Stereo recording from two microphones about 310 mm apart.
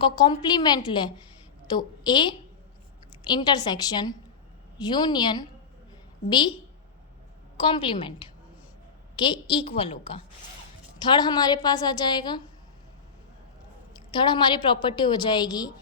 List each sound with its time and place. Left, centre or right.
0.0 s a woman's voice: centre
7.5 s a woman's voice: centre
14.1 s a woman's voice: centre